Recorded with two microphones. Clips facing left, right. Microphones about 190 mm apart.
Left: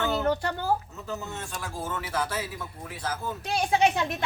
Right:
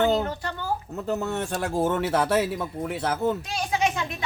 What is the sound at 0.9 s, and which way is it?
Speech, 60° right (ahead or behind).